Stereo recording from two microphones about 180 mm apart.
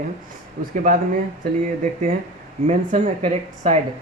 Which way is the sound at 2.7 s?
35° right (ahead or behind).